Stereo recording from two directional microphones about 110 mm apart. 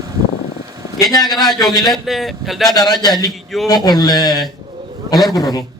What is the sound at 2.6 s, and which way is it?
A man's voice, 35° left (ahead or behind).